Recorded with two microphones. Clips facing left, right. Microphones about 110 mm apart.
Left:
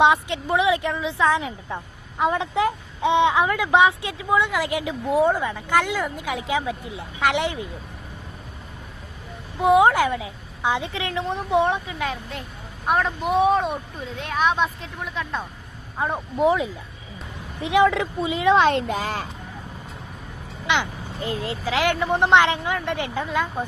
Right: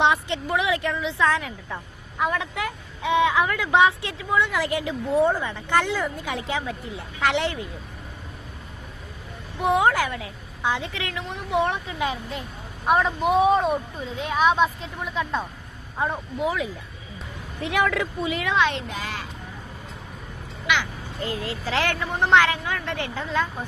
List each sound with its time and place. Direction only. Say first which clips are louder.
0.0 s a woman's voice: left 3 dB; 15° left (ahead or behind)
9.6 s a woman's voice: left 4 dB; 20° left (ahead or behind)
11.9 s a woman's voice: right 1 dB; centre (ahead or behind)
17.6 s a woman's voice: left 5 dB; 20° left (ahead or behind)
18.5 s speech: left 5 dB; 45° left (ahead or behind)
20.7 s speech: left 2 dB; 20° left (ahead or behind)
21.6 s a woman's voice: left 4 dB; 10° left (ahead or behind)